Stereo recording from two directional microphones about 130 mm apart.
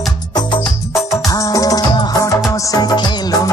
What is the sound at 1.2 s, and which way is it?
Music, 25° left (ahead or behind).